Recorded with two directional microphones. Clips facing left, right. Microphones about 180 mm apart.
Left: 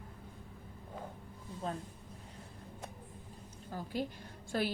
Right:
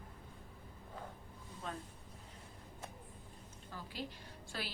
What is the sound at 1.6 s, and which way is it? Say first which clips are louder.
Speech: left 6 dB; 30° left (ahead or behind).